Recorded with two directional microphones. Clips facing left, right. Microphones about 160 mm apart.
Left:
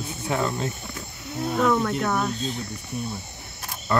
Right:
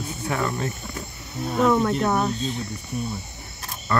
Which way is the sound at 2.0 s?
20° right (ahead or behind).